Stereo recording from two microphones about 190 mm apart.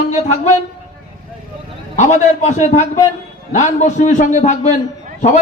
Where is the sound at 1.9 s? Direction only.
40° left (ahead or behind).